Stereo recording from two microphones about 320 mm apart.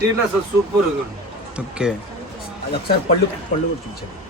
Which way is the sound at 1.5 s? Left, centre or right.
Centre.